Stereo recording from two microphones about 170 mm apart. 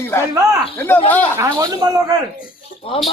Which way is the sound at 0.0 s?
15° left (ahead or behind).